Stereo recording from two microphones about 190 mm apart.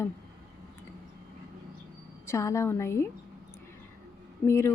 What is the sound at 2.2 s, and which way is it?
Speech, 15° left (ahead or behind).